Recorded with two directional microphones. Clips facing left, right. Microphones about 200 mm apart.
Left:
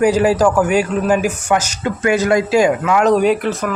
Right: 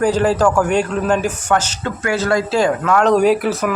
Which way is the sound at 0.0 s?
10° left (ahead or behind).